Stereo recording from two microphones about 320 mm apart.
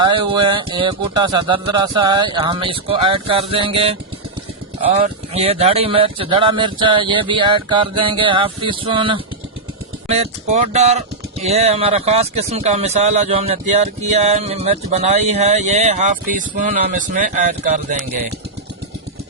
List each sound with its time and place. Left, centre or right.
0.0 s speech: centre